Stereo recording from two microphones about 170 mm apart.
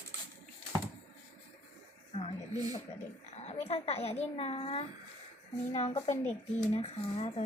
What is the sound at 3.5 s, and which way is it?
Speech, 35° left (ahead or behind).